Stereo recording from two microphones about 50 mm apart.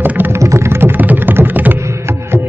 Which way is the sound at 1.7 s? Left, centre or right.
Right.